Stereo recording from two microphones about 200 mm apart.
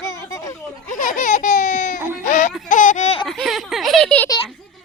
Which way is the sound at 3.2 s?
Centre (ahead or behind).